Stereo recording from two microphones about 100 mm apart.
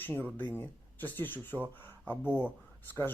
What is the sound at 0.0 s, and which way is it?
Speech, 20° left (ahead or behind).